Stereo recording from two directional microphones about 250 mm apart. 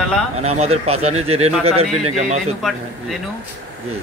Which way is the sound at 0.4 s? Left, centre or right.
Right.